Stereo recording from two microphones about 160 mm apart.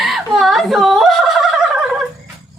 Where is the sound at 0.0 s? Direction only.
Centre (ahead or behind).